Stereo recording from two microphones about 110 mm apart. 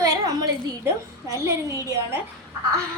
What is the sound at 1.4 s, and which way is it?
Speech, 30° right (ahead or behind).